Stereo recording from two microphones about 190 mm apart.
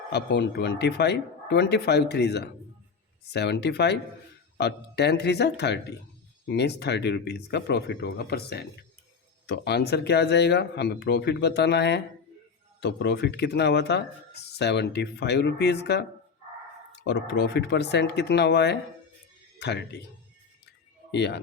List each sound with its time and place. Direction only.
0.1 s speech: 60° left (ahead or behind)
21.1 s speech: 65° left (ahead or behind)